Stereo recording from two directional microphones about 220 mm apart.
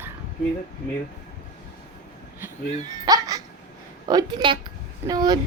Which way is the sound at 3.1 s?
15° right (ahead or behind).